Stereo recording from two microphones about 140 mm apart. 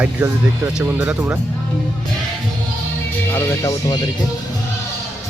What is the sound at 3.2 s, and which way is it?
Speech, 20° left (ahead or behind).